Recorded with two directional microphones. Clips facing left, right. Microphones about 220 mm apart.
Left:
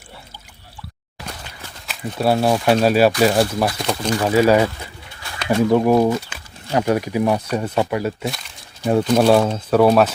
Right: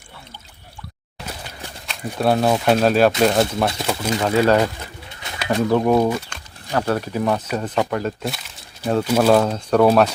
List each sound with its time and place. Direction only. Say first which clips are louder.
1.9 s speech: even; 5° left (ahead or behind)
4.2 s speech: left 2 dB; 10° left (ahead or behind)
5.2 s bird: right 1 dB; 20° right (ahead or behind)
5.7 s speech: left 1 dB; 5° left (ahead or behind)
6.3 s a sound: left 1 dB; 5° left (ahead or behind)
6.7 s speech: left 3 dB; 15° left (ahead or behind); by 8.5 s centre (ahead or behind)
8.8 s speech: left 3 dB; 15° left (ahead or behind)
9.0 s speech: left 1 dB; 5° right (ahead or behind)
9.3 s speech: left 1 dB; 5° left (ahead or behind)